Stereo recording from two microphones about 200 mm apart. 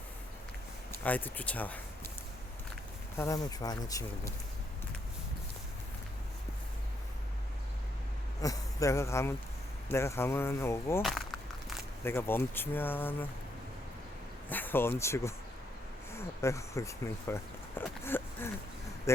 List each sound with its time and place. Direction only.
1.0 s speech: 10° left (ahead or behind)
3.2 s speech: 15° left (ahead or behind)
8.4 s speech: 15° left (ahead or behind)
11.0 s a sound: centre (ahead or behind)
12.0 s speech: 10° left (ahead or behind)
14.5 s speech: 10° left (ahead or behind)